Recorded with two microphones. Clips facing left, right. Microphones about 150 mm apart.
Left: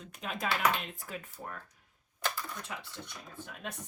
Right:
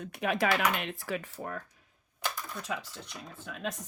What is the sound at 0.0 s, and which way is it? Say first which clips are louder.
Speech: right 8 dB; 70° right (ahead or behind).